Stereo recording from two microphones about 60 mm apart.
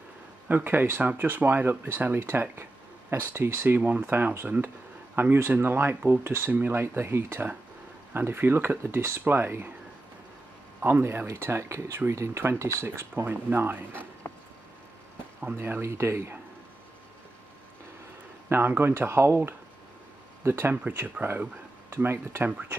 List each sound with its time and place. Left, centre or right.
0.5 s speech: right
7.0 s speech: right
10.8 s speech: right
12.8 s speech: right
15.5 s speech: right
18.5 s speech: right